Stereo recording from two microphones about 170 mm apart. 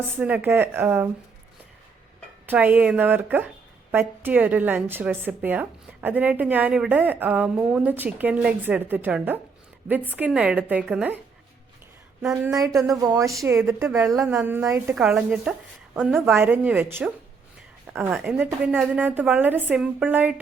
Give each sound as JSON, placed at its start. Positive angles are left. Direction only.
{"t": 0.2, "sound": "a woman's voice", "side_deg": -10}
{"t": 2.5, "sound": "a woman's voice", "side_deg": -10}
{"t": 12.2, "sound": "a woman's voice", "side_deg": -5}
{"t": 12.5, "sound": "a woman's voice", "side_deg": -20}